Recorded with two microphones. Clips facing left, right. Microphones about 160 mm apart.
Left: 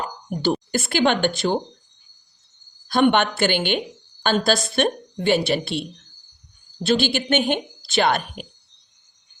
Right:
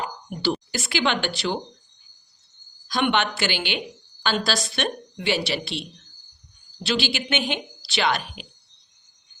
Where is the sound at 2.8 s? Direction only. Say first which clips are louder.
Left 5 dB; 50° left (ahead or behind).